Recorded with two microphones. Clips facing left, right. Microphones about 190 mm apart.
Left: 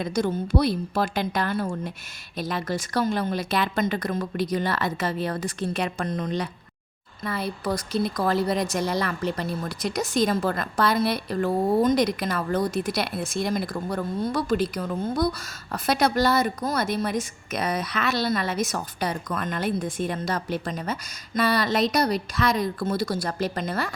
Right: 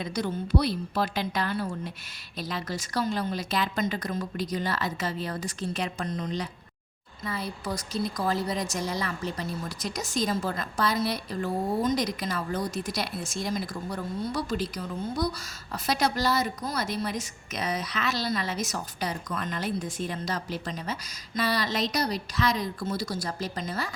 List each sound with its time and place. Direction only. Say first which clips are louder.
0.0 s a woman's voice: left 5 dB; 45° left (ahead or behind)